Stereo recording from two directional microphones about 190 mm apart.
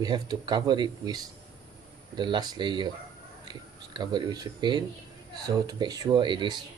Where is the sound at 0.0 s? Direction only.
20° right (ahead or behind).